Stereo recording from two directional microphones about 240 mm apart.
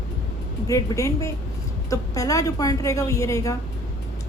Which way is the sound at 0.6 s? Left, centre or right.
Centre.